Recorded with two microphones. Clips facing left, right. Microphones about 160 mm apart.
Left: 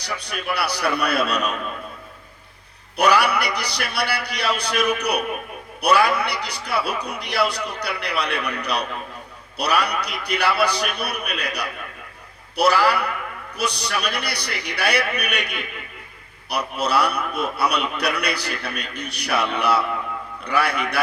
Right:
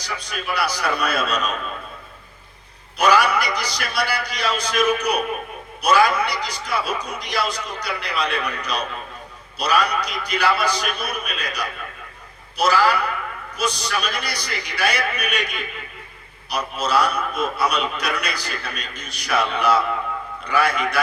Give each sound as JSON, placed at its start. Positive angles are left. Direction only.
{"t": 0.0, "sound": "a man's voice", "side_deg": 65}
{"t": 3.0, "sound": "a man's voice", "side_deg": 65}